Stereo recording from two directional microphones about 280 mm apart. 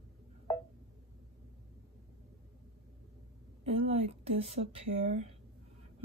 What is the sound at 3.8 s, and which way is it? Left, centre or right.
Speech, right.